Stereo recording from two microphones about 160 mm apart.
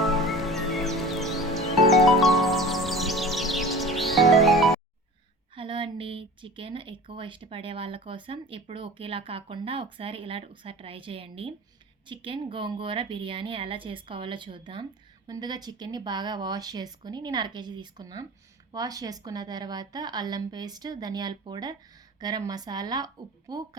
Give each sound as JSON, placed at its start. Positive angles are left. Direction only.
{"t": 0.0, "sound": "music", "side_deg": 0}
{"t": 5.5, "sound": "a woman's voice", "side_deg": -30}